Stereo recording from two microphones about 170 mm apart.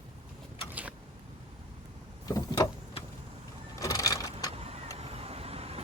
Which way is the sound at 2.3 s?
25° left (ahead or behind).